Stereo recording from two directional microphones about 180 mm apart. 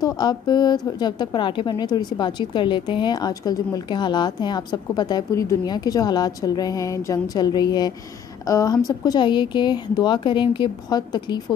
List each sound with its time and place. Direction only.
0.0 s speech: 25° left (ahead or behind)